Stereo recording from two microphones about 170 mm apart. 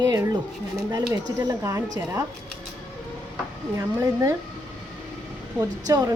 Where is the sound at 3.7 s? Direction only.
15° right (ahead or behind).